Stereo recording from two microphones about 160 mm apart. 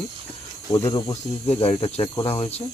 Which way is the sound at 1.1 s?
45° left (ahead or behind).